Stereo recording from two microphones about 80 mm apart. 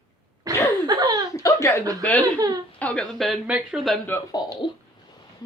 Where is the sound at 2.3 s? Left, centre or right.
Right.